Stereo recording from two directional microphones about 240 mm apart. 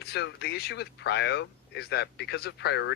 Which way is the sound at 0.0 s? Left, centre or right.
Left.